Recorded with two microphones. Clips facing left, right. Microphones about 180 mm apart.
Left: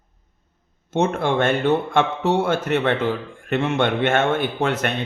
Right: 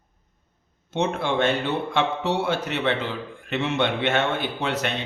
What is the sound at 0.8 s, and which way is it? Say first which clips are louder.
A man's voice: left 4 dB; 50° left (ahead or behind).